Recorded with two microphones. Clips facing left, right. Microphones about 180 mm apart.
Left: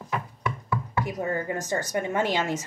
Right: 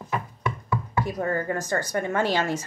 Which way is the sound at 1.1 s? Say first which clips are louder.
Right 3 dB; 15° left (ahead or behind).